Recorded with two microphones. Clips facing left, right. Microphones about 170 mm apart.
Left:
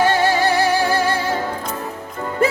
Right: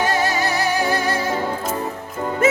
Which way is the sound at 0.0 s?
30° left (ahead or behind).